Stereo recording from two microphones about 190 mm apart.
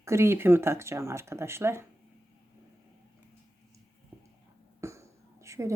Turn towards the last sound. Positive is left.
turn(degrees=-15)  # may be behind; listen again after turning